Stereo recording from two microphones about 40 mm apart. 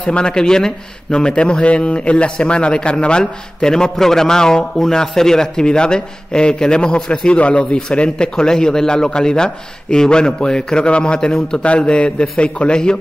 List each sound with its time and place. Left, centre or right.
0.0 s a man's voice: left